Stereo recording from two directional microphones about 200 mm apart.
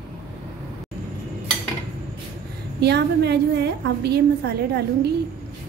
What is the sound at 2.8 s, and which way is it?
A woman's voice, 55° right (ahead or behind).